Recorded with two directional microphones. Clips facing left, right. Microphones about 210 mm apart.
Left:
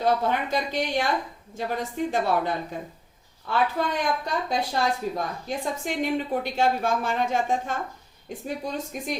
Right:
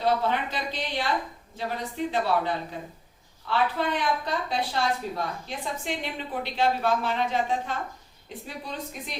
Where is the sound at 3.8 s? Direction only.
45° left (ahead or behind).